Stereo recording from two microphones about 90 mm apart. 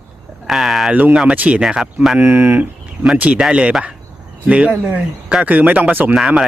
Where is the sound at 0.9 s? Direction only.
15° right (ahead or behind).